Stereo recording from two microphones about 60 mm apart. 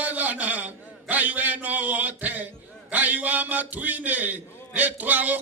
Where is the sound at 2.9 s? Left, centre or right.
Right.